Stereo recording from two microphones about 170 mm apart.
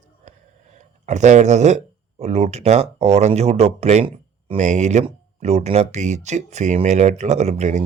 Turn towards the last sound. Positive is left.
turn(degrees=-40)  # may be behind; listen again after turning